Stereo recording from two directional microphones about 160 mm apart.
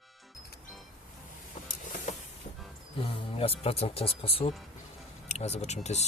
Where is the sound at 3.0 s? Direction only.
35° left (ahead or behind).